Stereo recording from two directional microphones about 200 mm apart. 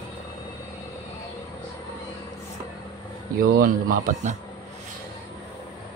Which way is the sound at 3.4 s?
50° right (ahead or behind).